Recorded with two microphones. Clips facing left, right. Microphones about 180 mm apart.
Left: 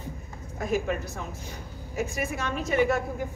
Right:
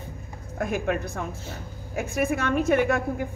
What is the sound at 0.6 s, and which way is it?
A woman's voice, 60° right (ahead or behind).